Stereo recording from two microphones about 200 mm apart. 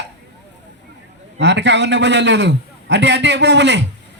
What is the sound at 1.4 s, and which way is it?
A man's voice, 60° right (ahead or behind).